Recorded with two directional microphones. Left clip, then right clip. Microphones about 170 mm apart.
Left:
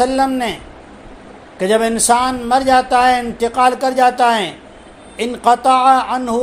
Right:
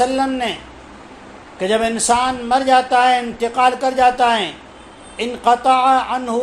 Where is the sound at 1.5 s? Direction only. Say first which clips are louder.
Left 3 dB; 40° left (ahead or behind).